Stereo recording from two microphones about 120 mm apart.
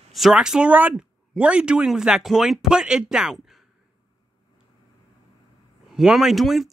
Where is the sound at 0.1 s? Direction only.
5° right (ahead or behind).